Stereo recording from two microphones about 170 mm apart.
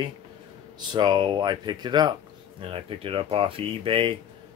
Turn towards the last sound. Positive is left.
turn(degrees=-30)  # may be behind; listen again after turning